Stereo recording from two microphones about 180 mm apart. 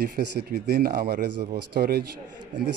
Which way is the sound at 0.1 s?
55° right (ahead or behind).